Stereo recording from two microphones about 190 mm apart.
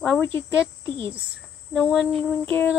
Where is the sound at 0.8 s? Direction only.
25° right (ahead or behind).